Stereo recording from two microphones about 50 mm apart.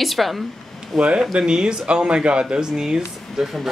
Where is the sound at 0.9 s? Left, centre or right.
Right.